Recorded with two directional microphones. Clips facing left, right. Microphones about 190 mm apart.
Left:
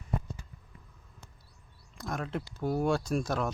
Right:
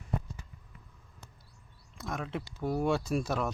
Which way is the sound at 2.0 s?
Centre (ahead or behind).